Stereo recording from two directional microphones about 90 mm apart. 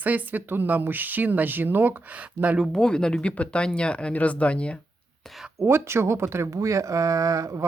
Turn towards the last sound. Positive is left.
turn(degrees=-35)  # may be behind; listen again after turning